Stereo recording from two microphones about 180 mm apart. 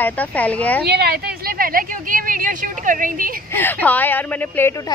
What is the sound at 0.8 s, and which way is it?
A woman's voice, 60° right (ahead or behind).